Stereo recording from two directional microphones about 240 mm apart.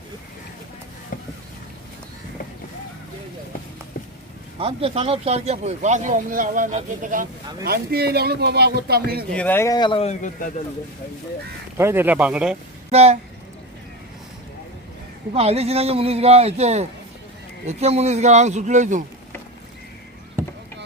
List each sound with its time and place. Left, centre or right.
1.1 s a sound: left
4.6 s a man's voice: right
9.3 s speech: centre; by 10.5 s left
11.8 s speech: centre
12.9 s speech: right
15.3 s a man's voice: right
20.4 s rowboat: centre